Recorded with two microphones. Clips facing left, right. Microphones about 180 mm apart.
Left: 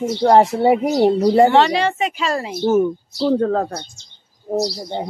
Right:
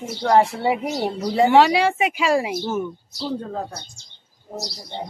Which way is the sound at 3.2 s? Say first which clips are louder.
Left 10 dB; 70° left (ahead or behind).